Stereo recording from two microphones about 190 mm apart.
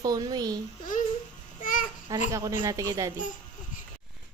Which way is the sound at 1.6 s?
45° left (ahead or behind).